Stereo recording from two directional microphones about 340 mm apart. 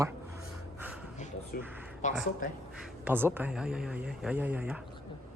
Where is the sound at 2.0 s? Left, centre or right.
Left.